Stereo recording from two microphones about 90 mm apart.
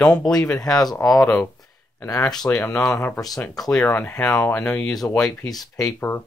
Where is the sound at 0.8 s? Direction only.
45° left (ahead or behind).